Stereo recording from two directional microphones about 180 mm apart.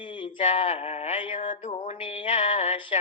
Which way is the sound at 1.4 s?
45° left (ahead or behind).